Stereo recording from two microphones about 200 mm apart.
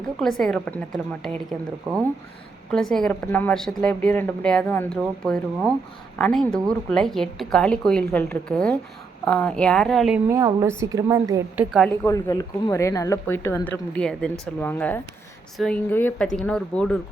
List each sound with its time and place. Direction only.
0.2 s a woman's voice: centre (ahead or behind)
2.7 s a woman's voice: 5° left (ahead or behind)
10.2 s a woman's voice: 15° right (ahead or behind)
11.9 s a woman's voice: 15° left (ahead or behind)